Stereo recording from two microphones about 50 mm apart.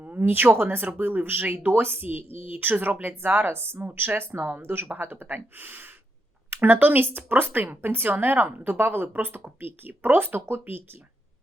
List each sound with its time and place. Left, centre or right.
0.0 s a woman's voice: right